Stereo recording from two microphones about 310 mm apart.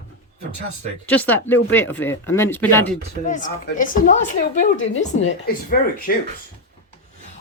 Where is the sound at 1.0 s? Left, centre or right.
Centre.